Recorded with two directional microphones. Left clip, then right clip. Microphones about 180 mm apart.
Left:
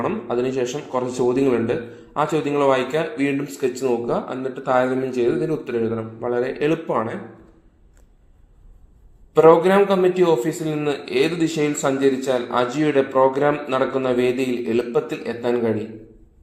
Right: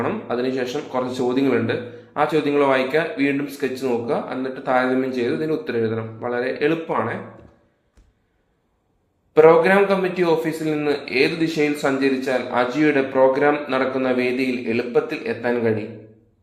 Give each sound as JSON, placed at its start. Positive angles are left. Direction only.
{"t": 0.0, "sound": "a man's voice", "side_deg": 35}
{"t": 9.3, "sound": "a man's voice", "side_deg": 35}